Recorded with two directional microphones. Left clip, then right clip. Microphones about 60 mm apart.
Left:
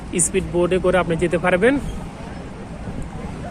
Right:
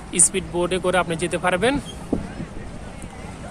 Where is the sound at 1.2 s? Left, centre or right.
Right.